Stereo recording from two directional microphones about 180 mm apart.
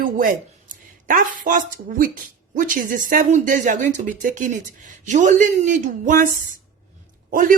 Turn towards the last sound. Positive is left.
turn(degrees=-50)  # may be behind; listen again after turning